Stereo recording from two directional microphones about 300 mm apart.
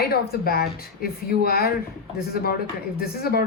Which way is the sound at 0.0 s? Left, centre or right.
Left.